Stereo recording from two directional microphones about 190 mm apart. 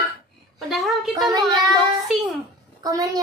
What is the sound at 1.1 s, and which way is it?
Child singing, 20° right (ahead or behind).